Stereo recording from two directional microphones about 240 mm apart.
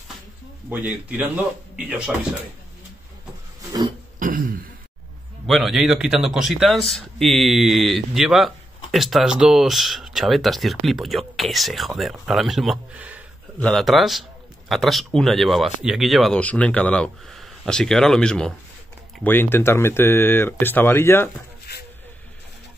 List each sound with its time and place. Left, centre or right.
0.7 s speech: centre
4.2 s throat clearing: right
5.5 s speech: centre